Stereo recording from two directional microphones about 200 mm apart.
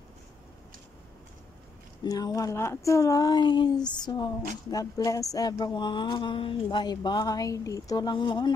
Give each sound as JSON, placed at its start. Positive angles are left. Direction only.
{"t": 2.0, "sound": "speech", "side_deg": 20}